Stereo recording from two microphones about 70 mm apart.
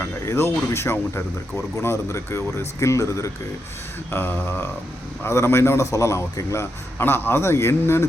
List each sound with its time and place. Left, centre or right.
0.0 s a man's voice: left
4.1 s mantra: left
5.2 s a man's voice: left
7.0 s a man's voice: left